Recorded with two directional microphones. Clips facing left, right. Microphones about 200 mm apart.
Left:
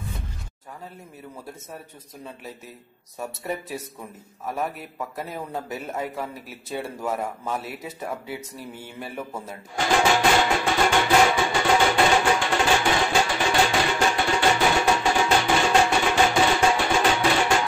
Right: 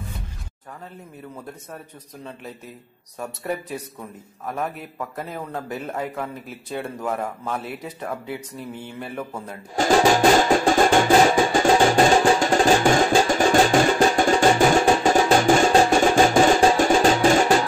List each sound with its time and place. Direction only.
3.2 s a man's voice: 5° left (ahead or behind)
9.8 s music: 40° right (ahead or behind)